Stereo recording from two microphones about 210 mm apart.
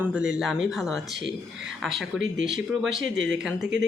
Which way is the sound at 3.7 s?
60° right (ahead or behind).